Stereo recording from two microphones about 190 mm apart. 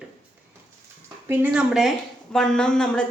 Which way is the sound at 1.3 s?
5° right (ahead or behind).